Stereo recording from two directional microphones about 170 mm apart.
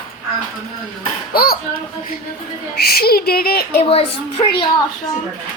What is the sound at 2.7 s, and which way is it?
Speech, 65° left (ahead or behind).